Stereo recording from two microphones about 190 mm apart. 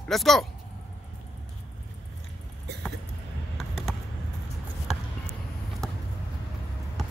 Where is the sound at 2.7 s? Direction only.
60° right (ahead or behind).